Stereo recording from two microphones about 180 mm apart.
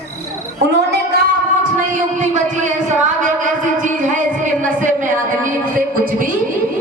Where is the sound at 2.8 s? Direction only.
45° right (ahead or behind).